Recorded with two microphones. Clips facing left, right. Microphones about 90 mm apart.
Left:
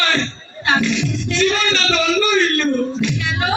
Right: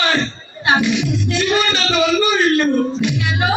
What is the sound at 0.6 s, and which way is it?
Music, 10° right (ahead or behind).